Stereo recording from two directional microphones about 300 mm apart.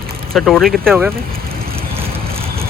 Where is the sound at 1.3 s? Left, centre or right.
Right.